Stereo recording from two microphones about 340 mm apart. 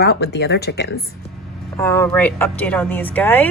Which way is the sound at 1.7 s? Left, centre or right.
Centre.